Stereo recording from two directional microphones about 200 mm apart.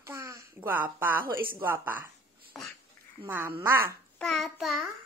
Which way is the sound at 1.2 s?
45° right (ahead or behind).